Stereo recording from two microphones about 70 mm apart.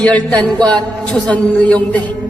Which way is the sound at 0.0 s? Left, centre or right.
Centre.